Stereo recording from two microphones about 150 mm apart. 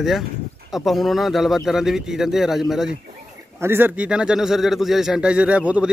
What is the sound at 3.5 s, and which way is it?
Speech, 15° right (ahead or behind).